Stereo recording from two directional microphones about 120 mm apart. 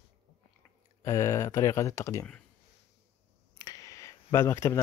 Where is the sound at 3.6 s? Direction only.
30° left (ahead or behind).